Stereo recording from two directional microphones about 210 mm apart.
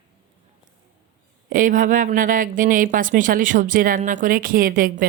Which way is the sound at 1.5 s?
40° right (ahead or behind).